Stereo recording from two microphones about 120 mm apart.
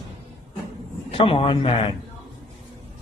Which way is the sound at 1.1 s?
50° left (ahead or behind).